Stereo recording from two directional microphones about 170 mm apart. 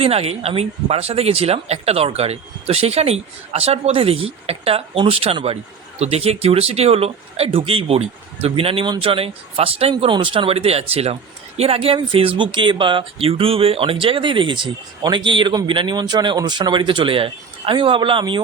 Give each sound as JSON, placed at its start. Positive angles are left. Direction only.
{"t": 0.0, "sound": "speech", "side_deg": -35}